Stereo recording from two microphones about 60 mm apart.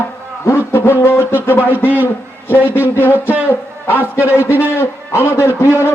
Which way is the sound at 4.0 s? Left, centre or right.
Right.